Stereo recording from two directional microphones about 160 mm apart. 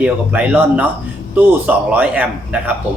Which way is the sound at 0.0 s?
10° right (ahead or behind).